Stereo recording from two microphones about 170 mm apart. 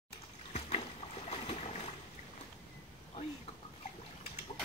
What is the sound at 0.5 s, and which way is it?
Boat, 40° left (ahead or behind).